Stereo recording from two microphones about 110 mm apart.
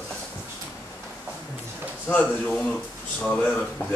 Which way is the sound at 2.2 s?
5° left (ahead or behind).